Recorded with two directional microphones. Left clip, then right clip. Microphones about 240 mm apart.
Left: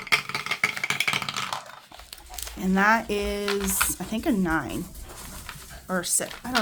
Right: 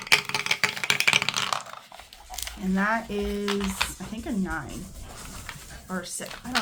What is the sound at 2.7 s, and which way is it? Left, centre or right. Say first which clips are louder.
Speech: left 5 dB; left.